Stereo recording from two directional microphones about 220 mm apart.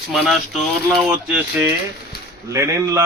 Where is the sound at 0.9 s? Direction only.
5° right (ahead or behind).